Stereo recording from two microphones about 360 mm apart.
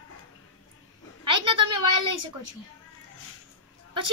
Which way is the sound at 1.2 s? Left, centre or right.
Right.